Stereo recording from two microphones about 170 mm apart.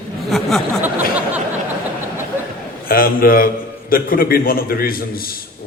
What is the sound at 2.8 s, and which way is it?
A man's voice, 60° left (ahead or behind).